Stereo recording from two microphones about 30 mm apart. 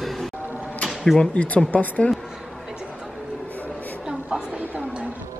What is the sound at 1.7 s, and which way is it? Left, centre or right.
Speech, left.